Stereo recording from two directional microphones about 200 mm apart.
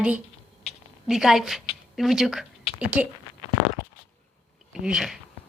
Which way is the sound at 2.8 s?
5° right (ahead or behind).